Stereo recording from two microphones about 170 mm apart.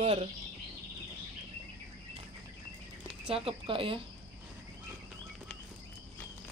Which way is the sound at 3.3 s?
35° right (ahead or behind).